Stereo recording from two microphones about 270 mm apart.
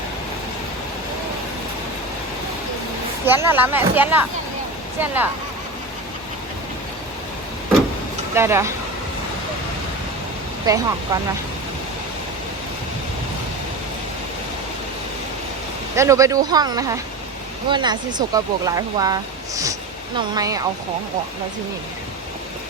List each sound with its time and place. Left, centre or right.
3.2 s speech: centre
8.4 s speech: centre
10.7 s speech: centre
16.0 s speech: centre